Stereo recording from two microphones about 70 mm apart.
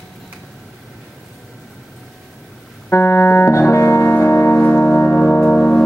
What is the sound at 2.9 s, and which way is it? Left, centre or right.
Music, left.